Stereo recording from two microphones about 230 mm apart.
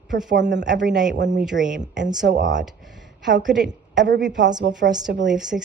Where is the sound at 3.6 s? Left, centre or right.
Right.